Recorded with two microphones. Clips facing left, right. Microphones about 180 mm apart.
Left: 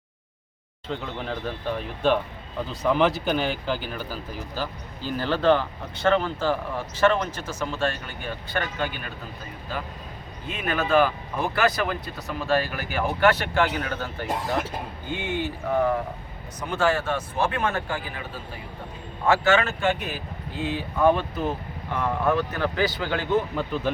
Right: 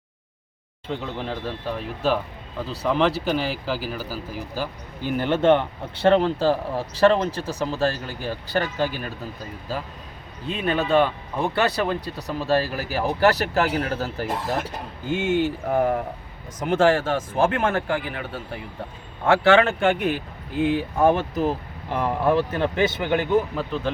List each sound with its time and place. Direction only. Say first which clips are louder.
0.9 s speech: right 2 dB; 5° right (ahead or behind); by 9.1 s 35° right (ahead or behind)
10.4 s speech: right 4 dB; 30° right (ahead or behind)
15.2 s speech: right 6 dB; 50° right (ahead or behind)
17.4 s speech: right 5 dB; 50° right (ahead or behind); by 23.5 s 15° right (ahead or behind)
23.6 s speech: even; centre (ahead or behind)